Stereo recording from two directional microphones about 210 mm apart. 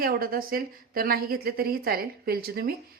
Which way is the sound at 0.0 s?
45° right (ahead or behind).